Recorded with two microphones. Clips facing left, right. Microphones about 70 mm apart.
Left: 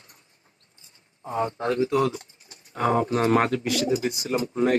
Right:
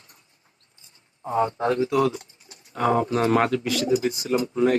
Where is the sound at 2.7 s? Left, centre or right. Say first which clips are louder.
Right 1 dB; left.